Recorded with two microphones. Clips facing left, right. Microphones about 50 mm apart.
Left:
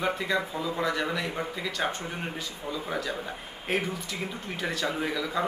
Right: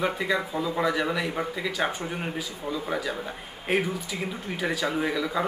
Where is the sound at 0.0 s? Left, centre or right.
Centre.